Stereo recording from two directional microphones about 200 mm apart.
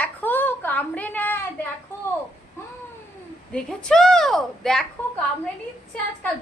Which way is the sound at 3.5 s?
5° left (ahead or behind).